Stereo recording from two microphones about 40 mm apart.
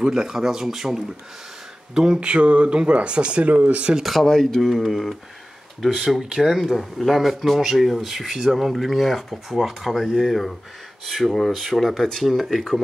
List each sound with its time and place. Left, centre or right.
0.0 s speech: centre
2.1 s speech: right
3.4 s speech: right
4.0 s speech: centre